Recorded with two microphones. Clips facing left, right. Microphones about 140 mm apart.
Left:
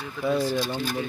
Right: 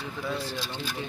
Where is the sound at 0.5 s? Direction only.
50° left (ahead or behind).